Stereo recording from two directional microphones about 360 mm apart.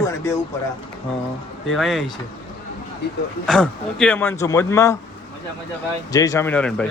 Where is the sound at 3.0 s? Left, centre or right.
Left.